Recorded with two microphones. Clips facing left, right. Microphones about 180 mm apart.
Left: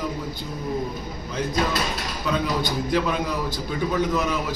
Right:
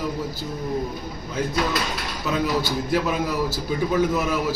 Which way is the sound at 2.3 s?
5° right (ahead or behind).